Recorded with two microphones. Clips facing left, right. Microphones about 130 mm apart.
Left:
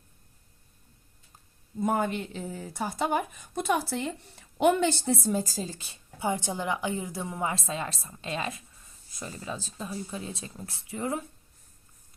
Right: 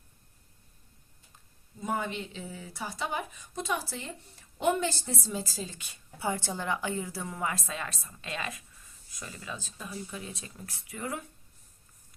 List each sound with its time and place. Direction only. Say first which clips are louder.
1.8 s speech: left 6 dB; 50° left (ahead or behind); by 11.3 s 25° left (ahead or behind)